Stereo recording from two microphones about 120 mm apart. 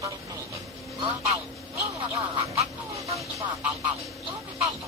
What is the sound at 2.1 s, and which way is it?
Quack, 20° right (ahead or behind).